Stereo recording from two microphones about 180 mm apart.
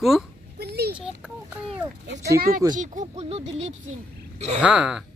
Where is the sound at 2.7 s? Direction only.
45° right (ahead or behind).